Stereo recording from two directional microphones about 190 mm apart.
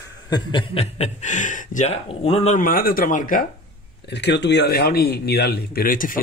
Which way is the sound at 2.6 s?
50° left (ahead or behind).